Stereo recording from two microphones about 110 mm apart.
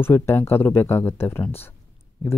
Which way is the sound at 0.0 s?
20° left (ahead or behind).